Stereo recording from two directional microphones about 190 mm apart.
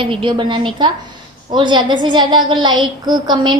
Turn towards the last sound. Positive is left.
turn(degrees=-25)  # may be behind; listen again after turning